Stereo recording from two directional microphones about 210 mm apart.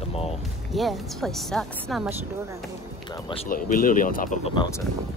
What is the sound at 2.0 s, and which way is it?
Speech, 15° right (ahead or behind).